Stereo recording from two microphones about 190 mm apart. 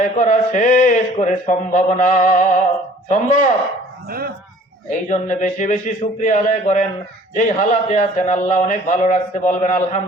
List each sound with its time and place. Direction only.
0.0 s a man's voice: 40° left (ahead or behind)
4.9 s a man's voice: 40° left (ahead or behind)